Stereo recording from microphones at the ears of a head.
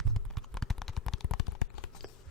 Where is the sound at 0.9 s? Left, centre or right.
Left.